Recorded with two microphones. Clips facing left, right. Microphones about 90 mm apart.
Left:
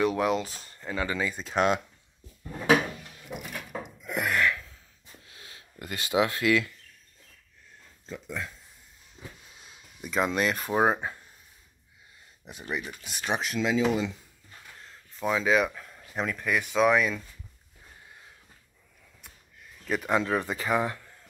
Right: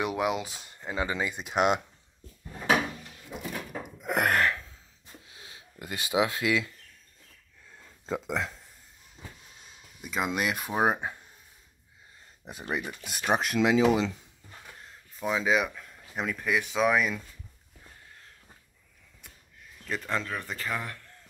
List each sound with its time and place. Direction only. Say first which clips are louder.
0.0 s speech: left 3 dB; 15° right (ahead or behind)
3.8 s a sound: right 5 dB; 55° right (ahead or behind)
4.4 s gasp: even; 35° right (ahead or behind)
5.3 s speech: even; 20° right (ahead or behind)
8.2 s speech: right 2 dB; 90° right
10.0 s speech: left 3 dB; 5° right (ahead or behind)
12.4 s speech: right 1 dB; 40° right (ahead or behind); by 14.1 s 75° right (ahead or behind)
15.1 s speech: left 2 dB; 5° right (ahead or behind)
19.2 s a sound: even; 5° left (ahead or behind)
20.2 s speech: left 7 dB; 20° left (ahead or behind)